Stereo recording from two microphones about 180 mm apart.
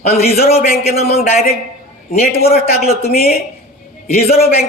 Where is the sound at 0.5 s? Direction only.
35° left (ahead or behind).